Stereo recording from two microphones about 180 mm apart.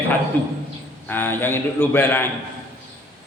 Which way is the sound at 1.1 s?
10° left (ahead or behind).